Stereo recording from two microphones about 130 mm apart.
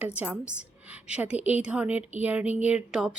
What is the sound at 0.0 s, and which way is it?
A woman's voice, 10° right (ahead or behind).